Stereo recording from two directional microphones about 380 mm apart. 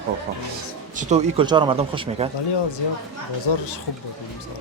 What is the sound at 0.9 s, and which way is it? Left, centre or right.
Speech, centre.